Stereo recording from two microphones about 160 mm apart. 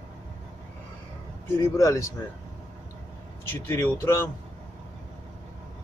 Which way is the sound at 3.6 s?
15° left (ahead or behind).